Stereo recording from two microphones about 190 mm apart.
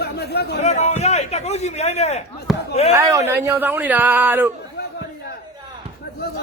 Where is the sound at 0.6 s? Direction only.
35° left (ahead or behind).